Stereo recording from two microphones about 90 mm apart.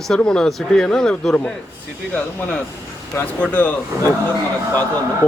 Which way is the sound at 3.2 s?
15° left (ahead or behind).